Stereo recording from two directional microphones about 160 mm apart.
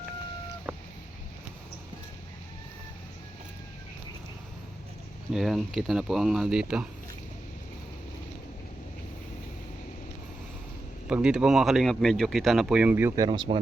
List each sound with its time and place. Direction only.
5.3 s speech: centre (ahead or behind)
11.1 s speech: 5° right (ahead or behind)
13.2 s speech: 30° right (ahead or behind)